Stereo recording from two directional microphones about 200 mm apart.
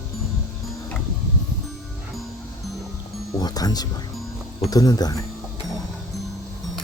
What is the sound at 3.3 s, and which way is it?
Music, 20° left (ahead or behind).